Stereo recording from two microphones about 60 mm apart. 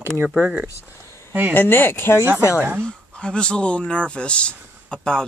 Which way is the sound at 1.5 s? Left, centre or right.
Left.